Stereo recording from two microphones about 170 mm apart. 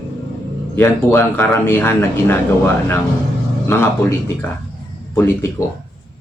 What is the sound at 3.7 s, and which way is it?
A man's voice, 15° left (ahead or behind).